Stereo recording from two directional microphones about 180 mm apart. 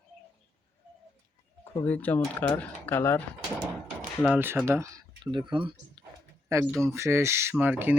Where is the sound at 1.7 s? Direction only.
10° left (ahead or behind).